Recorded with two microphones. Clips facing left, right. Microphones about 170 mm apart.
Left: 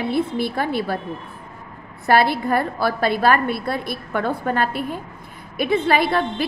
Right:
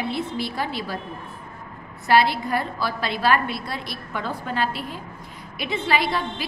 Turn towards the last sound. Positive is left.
turn(degrees=55)  # may be behind; listen again after turning